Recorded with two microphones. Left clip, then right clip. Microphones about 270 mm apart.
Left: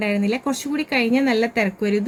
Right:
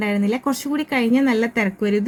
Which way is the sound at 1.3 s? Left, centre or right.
Left.